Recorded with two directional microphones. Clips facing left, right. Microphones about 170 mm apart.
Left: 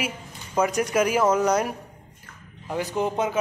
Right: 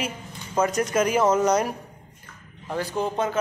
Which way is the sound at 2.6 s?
15° left (ahead or behind).